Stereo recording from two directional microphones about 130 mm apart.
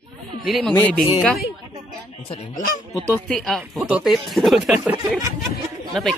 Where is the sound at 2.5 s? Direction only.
90° left.